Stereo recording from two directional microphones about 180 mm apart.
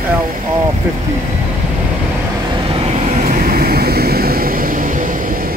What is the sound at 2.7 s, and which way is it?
Vehicle, 35° right (ahead or behind).